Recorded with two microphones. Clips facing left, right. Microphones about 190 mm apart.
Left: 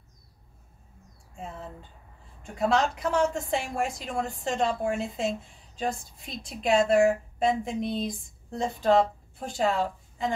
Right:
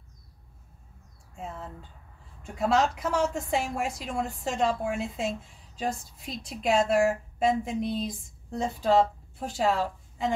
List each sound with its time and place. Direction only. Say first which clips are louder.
2.4 s a woman's voice: even; 5° right (ahead or behind)